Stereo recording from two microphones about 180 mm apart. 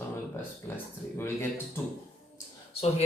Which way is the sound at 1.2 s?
15° left (ahead or behind).